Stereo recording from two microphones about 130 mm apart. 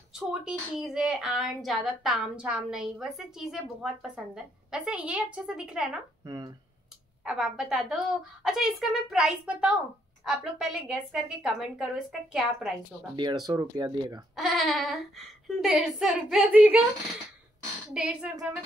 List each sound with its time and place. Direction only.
0.1 s speech: 5° right (ahead or behind)
6.2 s speech: 25° right (ahead or behind)
7.2 s speech: 5° right (ahead or behind)
13.1 s speech: 35° right (ahead or behind)
14.3 s speech: centre (ahead or behind)
17.9 s a woman's voice: 10° right (ahead or behind)